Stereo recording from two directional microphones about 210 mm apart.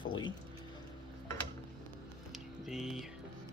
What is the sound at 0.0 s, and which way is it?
Music, 20° left (ahead or behind).